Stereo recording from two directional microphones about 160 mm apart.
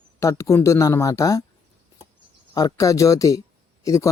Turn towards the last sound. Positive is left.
turn(degrees=20)  # may be behind; listen again after turning